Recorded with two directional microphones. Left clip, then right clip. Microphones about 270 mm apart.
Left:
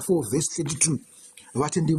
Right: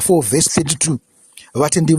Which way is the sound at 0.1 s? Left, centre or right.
Right.